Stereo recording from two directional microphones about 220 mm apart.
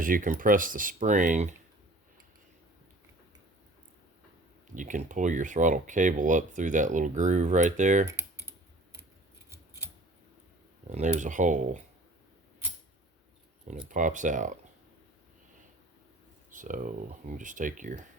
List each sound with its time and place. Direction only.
0.0 s speech: 40° right (ahead or behind)
4.7 s speech: 35° right (ahead or behind)
8.4 s scissors: 10° right (ahead or behind)
10.8 s speech: 35° right (ahead or behind)
13.7 s speech: 35° right (ahead or behind)
16.5 s speech: 35° right (ahead or behind)